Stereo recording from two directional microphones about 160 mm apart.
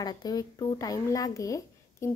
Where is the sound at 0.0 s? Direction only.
25° left (ahead or behind).